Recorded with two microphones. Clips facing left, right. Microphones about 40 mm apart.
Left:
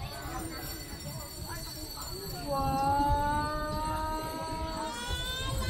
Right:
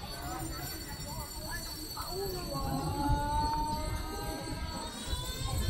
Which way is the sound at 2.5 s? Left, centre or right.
Left.